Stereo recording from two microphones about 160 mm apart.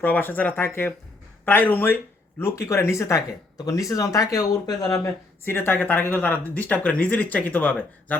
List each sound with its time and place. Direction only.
0.0 s speech: 10° left (ahead or behind)